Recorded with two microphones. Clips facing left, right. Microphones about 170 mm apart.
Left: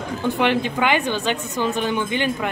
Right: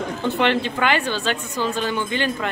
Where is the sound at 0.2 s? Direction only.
10° left (ahead or behind).